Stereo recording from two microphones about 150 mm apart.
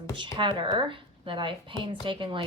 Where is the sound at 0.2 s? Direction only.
35° right (ahead or behind).